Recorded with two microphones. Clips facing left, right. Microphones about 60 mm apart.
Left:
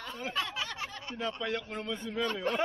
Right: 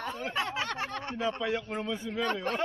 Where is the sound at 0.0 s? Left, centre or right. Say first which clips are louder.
Right 4 dB; right.